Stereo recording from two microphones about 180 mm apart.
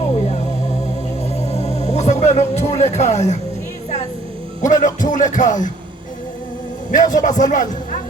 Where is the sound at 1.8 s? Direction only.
40° left (ahead or behind).